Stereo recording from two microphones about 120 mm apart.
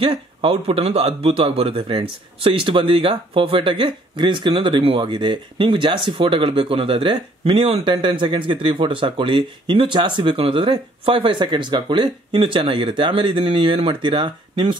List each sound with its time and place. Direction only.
0.0 s a man's voice: 50° right (ahead or behind)